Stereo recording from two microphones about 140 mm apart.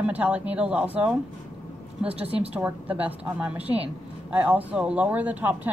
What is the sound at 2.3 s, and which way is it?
Speech, 45° right (ahead or behind).